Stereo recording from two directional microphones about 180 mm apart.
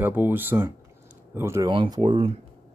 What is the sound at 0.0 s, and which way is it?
Speech, 10° right (ahead or behind).